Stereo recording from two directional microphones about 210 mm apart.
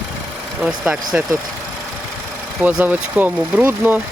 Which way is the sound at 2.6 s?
5° right (ahead or behind).